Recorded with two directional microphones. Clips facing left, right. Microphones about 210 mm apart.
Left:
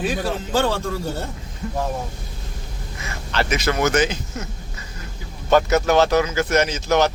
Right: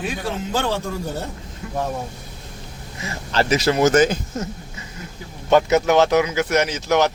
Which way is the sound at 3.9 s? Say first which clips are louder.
Right 4 dB; 45° right (ahead or behind).